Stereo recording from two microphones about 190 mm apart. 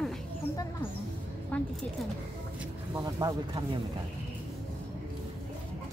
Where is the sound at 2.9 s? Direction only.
20° right (ahead or behind).